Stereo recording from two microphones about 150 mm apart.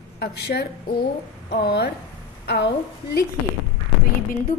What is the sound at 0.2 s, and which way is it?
A woman's voice, 90° left.